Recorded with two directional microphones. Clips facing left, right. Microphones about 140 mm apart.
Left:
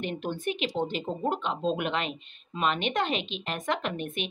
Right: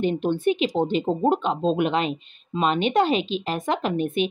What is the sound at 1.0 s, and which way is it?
Speech, 35° right (ahead or behind).